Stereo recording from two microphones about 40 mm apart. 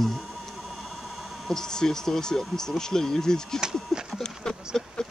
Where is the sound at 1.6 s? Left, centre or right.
Centre.